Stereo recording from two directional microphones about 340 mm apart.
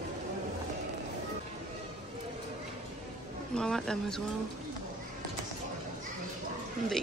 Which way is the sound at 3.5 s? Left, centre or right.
Centre.